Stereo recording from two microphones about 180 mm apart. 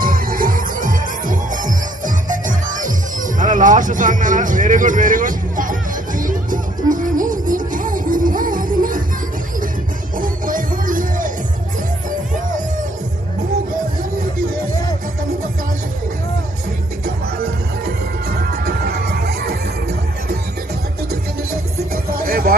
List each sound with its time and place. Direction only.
0.0 s music: 50° right (ahead or behind)
10.2 s music: 50° right (ahead or behind)
12.3 s music: 45° right (ahead or behind)
18.3 s music: 60° right (ahead or behind)
22.1 s a sound: 55° right (ahead or behind)